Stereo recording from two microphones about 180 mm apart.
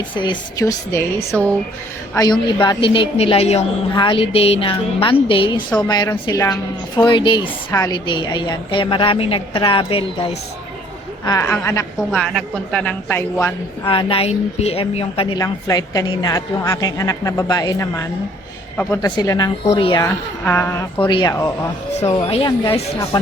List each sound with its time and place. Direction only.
0.2 s a woman's voice: 25° left (ahead or behind)
1.3 s speech: 5° left (ahead or behind)
2.1 s a woman's voice: 25° left (ahead or behind)
11.3 s speech: 15° left (ahead or behind)
12.2 s speech: centre (ahead or behind)
13.8 s a woman's voice: 30° left (ahead or behind)
15.4 s a woman's voice: 20° left (ahead or behind)
19.6 s a woman's voice: 30° left (ahead or behind)
20.4 s speech: 10° left (ahead or behind)
21.1 s a woman's voice: 25° left (ahead or behind)
22.0 s a woman's voice: 30° left (ahead or behind)